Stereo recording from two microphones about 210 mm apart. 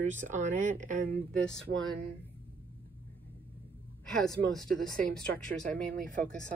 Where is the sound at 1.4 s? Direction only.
5° left (ahead or behind).